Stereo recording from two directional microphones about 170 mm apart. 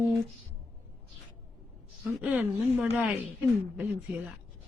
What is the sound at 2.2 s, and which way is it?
Speech, 5° right (ahead or behind).